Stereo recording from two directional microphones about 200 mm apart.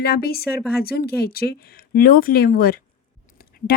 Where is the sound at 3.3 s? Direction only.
50° left (ahead or behind).